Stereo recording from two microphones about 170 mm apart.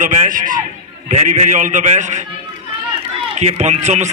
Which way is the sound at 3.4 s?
45° right (ahead or behind).